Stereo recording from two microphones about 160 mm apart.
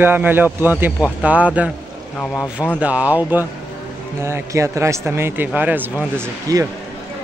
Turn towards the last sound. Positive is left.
turn(degrees=-20)  # may be behind; listen again after turning